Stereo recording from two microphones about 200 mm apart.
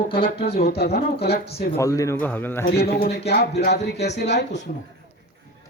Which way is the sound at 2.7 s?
50° left (ahead or behind).